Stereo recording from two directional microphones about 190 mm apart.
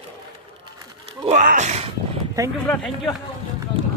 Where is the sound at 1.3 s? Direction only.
45° right (ahead or behind).